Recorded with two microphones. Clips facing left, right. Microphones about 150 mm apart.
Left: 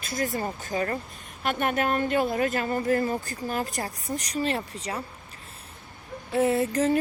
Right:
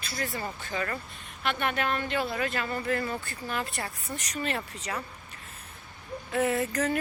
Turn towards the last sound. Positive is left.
turn(degrees=30)  # may be behind; listen again after turning